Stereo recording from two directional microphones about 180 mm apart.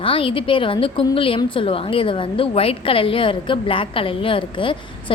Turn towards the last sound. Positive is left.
turn(degrees=30)  # may be behind; listen again after turning